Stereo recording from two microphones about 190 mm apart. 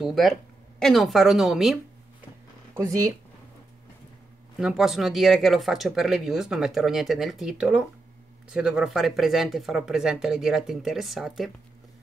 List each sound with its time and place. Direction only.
0.0 s speech: centre (ahead or behind)
2.8 s speech: 20° right (ahead or behind)
4.6 s speech: 5° right (ahead or behind)